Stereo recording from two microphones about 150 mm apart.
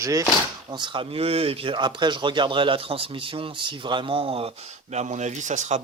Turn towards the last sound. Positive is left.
turn(degrees=-50)  # may be behind; listen again after turning